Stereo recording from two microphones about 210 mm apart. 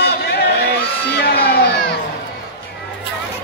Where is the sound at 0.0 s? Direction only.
50° left (ahead or behind).